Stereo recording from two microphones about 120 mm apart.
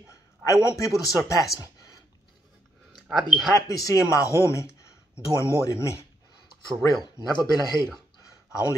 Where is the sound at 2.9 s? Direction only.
Centre (ahead or behind).